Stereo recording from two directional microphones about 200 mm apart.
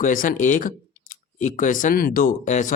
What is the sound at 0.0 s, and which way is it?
Speech, 40° left (ahead or behind).